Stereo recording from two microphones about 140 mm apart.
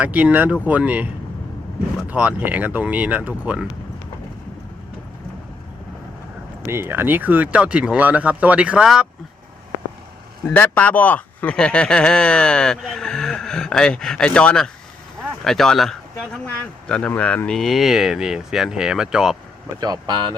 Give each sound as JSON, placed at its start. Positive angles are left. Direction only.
{"t": 0.0, "sound": "speech", "side_deg": -10}
{"t": 2.0, "sound": "speech", "side_deg": -10}
{"t": 6.7, "sound": "speech", "side_deg": -15}
{"t": 10.5, "sound": "speech", "side_deg": 10}
{"t": 19.8, "sound": "speech", "side_deg": -30}